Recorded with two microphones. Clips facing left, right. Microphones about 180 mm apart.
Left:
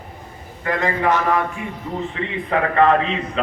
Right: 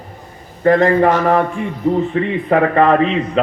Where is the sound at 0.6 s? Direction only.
50° right (ahead or behind).